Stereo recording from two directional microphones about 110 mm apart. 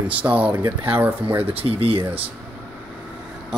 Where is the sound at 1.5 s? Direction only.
60° right (ahead or behind).